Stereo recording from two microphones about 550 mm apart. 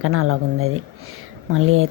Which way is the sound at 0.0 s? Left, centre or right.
Right.